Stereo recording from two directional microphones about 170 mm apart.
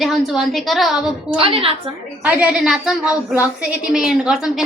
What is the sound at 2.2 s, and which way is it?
A woman's voice, 10° right (ahead or behind).